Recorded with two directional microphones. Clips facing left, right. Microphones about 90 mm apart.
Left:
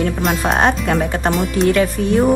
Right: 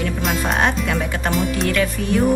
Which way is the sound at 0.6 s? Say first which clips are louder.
Left 4 dB; 35° left (ahead or behind).